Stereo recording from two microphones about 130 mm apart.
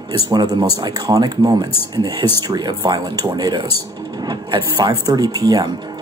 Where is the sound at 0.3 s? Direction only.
30° right (ahead or behind).